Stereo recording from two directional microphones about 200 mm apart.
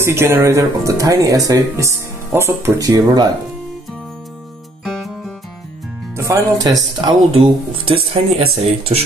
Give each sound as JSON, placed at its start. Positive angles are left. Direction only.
{"t": 0.0, "sound": "speech", "side_deg": -10}
{"t": 4.8, "sound": "music", "side_deg": 0}
{"t": 6.1, "sound": "speech", "side_deg": -15}